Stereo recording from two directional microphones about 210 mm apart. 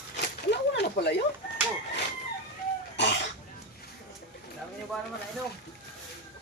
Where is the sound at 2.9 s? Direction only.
55° left (ahead or behind).